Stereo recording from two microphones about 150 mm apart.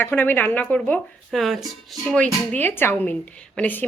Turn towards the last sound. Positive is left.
turn(degrees=10)  # may be behind; listen again after turning